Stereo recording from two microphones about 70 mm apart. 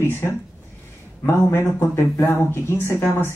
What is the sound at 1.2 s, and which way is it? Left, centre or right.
Speech, left.